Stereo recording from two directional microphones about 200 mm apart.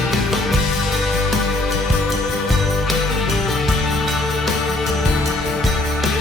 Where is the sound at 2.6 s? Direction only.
Centre (ahead or behind).